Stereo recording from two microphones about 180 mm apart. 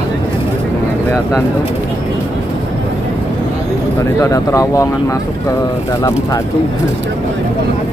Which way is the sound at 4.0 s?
15° left (ahead or behind).